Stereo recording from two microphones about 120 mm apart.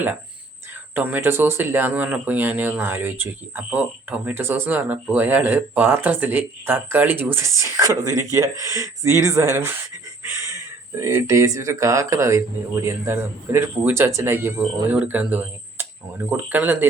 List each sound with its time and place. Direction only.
0.9 s speech: 15° right (ahead or behind)
10.9 s speech: 25° right (ahead or behind)